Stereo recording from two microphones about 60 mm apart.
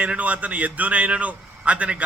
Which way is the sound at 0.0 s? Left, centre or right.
Right.